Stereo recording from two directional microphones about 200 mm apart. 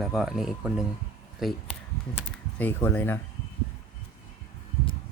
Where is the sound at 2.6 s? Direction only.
10° left (ahead or behind).